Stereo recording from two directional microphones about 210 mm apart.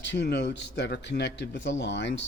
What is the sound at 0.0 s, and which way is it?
Speech, 55° left (ahead or behind).